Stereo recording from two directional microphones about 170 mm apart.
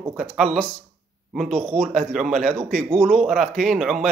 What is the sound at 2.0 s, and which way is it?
Speech, centre (ahead or behind).